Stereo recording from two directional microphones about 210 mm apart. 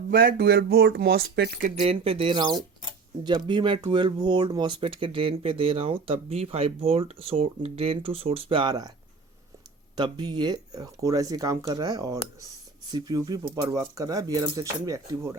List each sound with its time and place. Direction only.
0.1 s speech: 45° right (ahead or behind)
1.8 s speech: 25° right (ahead or behind)
9.9 s speech: 20° right (ahead or behind)